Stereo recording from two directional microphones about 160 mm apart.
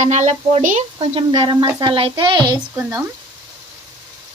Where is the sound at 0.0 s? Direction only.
45° right (ahead or behind).